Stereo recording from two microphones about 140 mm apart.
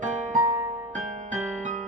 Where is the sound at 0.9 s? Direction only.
60° right (ahead or behind).